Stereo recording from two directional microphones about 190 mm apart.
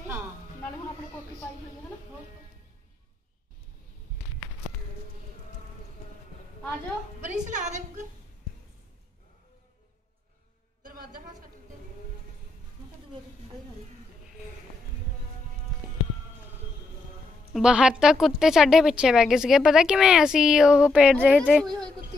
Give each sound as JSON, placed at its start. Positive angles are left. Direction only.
{"t": 7.2, "sound": "a woman's voice", "side_deg": -40}
{"t": 17.5, "sound": "speech", "side_deg": -5}